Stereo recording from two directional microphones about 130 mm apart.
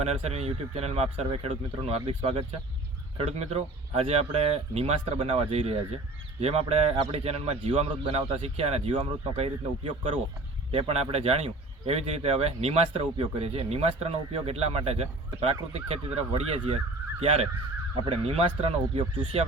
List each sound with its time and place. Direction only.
0.0 s speech: 55° right (ahead or behind)